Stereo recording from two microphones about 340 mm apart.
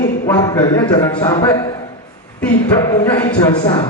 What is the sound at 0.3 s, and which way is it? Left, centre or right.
A man's voice, centre.